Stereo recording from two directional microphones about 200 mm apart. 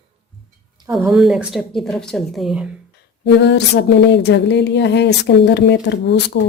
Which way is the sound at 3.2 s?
60° left (ahead or behind).